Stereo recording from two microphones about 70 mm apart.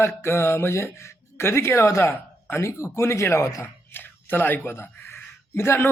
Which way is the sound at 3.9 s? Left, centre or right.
Left.